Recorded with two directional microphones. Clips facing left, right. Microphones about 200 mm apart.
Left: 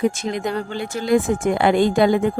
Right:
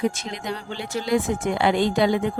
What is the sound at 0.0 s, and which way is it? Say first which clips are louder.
Speech: left 5 dB; 50° left (ahead or behind).